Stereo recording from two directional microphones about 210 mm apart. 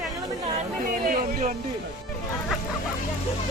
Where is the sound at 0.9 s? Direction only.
40° right (ahead or behind).